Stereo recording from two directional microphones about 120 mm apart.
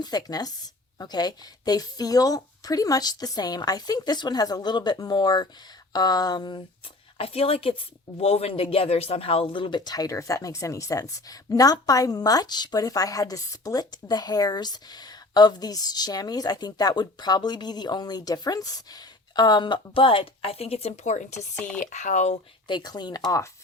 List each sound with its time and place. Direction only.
0.0 s speech: 35° left (ahead or behind)
7.2 s a woman's voice: 50° left (ahead or behind); by 21.4 s 85° left
21.5 s speech: 10° left (ahead or behind)
21.8 s speech: 90° left
22.6 s speech: 35° left (ahead or behind)